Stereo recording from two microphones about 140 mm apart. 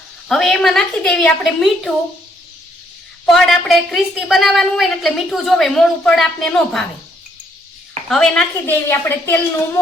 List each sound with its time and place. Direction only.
0.3 s a woman's voice: 5° left (ahead or behind)
3.2 s a woman's voice: centre (ahead or behind)
8.1 s a woman's voice: 5° left (ahead or behind)
8.9 s speech: 15° left (ahead or behind)